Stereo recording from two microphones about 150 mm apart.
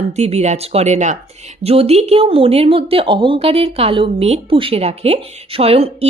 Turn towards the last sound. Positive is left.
turn(degrees=-40)  # may be behind; listen again after turning